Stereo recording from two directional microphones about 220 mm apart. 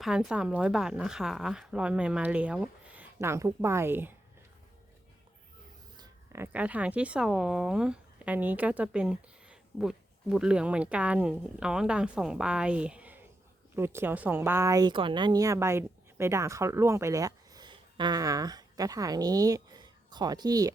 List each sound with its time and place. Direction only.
0.0 s speech: centre (ahead or behind)
6.0 s a woman's voice: 10° right (ahead or behind)